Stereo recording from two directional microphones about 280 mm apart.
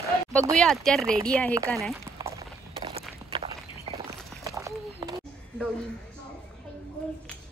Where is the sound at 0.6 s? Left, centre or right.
Centre.